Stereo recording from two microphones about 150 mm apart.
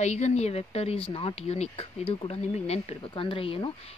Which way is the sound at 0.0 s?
45° left (ahead or behind).